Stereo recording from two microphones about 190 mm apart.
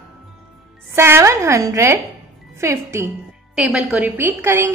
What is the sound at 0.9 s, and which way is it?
A woman's voice, 15° right (ahead or behind).